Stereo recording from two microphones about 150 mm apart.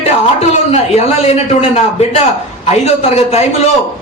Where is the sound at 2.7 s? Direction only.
45° left (ahead or behind).